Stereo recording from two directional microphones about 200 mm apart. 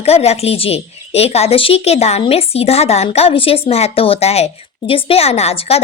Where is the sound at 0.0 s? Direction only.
30° left (ahead or behind).